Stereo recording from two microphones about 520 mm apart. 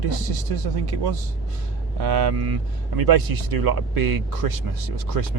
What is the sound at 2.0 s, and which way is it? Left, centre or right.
Speech, right.